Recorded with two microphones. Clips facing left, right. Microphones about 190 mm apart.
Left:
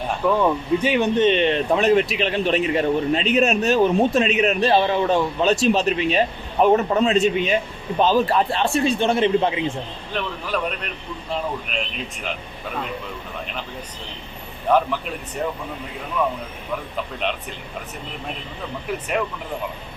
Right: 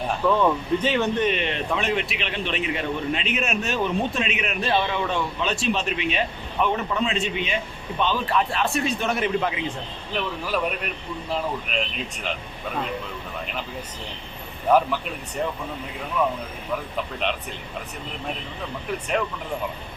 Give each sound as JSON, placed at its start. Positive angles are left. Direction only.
{"t": 0.3, "sound": "a man's voice", "side_deg": 10}
{"t": 10.5, "sound": "speech", "side_deg": -5}
{"t": 11.7, "sound": "speech", "side_deg": 0}
{"t": 14.7, "sound": "speech", "side_deg": -5}